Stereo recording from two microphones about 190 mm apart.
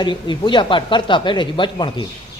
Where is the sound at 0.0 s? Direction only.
25° left (ahead or behind).